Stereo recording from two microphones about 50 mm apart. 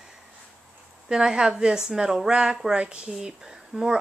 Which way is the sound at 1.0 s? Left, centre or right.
Centre.